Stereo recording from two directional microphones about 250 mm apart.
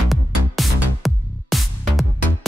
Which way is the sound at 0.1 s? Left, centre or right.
Centre.